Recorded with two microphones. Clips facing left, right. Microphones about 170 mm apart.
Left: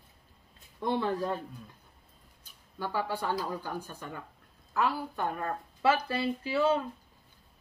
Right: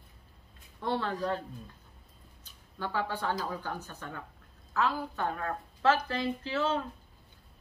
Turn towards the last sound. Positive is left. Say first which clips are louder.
# left 4 dB
turn(degrees=10)  # may be behind; listen again after turning